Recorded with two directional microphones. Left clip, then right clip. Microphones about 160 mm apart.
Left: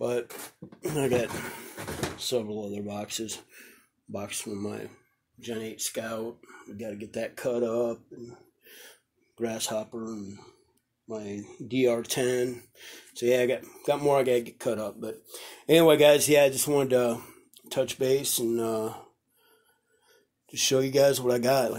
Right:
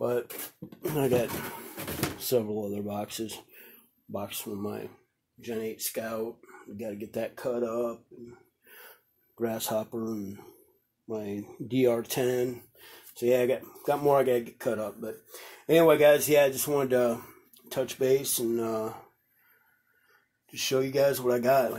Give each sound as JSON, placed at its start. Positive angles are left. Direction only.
{"t": 0.7, "sound": "speech", "side_deg": 0}
{"t": 2.1, "sound": "speech", "side_deg": -30}
{"t": 2.7, "sound": "speech", "side_deg": -15}
{"t": 6.8, "sound": "speech", "side_deg": -10}
{"t": 7.3, "sound": "speech", "side_deg": 25}
{"t": 8.6, "sound": "a sound", "side_deg": 15}
{"t": 9.5, "sound": "speech", "side_deg": -20}
{"t": 9.9, "sound": "speech", "side_deg": -35}
{"t": 11.1, "sound": "speech", "side_deg": -20}
{"t": 13.8, "sound": "speech", "side_deg": 20}
{"t": 20.4, "sound": "speech", "side_deg": 35}